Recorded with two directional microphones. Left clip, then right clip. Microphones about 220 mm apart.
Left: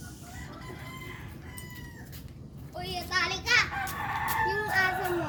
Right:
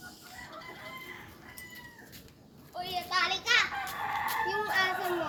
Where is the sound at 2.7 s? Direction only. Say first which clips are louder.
Even; 15° left (ahead or behind).